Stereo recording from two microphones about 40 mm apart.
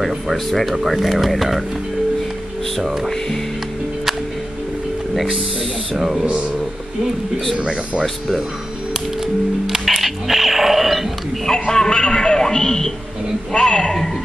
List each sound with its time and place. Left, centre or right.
0.0 s speech: centre
2.8 s speech: centre
5.9 s speech: centre
7.5 s speech: centre
8.0 s speech: centre
8.9 s music: centre
9.8 s a sound: centre
11.4 s a man's voice: centre